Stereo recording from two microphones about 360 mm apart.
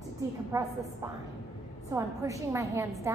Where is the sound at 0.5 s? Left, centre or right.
Centre.